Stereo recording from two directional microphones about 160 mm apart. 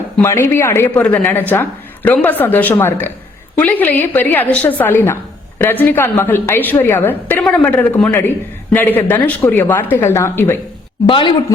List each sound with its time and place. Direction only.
0.2 s a woman's voice: 15° left (ahead or behind)
11.1 s speech: 30° left (ahead or behind)